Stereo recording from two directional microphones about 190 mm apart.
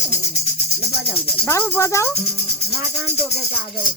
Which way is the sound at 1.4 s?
15° left (ahead or behind).